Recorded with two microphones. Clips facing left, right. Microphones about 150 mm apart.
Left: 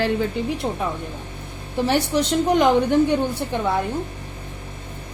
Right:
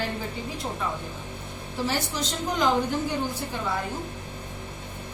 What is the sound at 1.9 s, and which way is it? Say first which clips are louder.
A woman's voice: left 10 dB; 65° left (ahead or behind).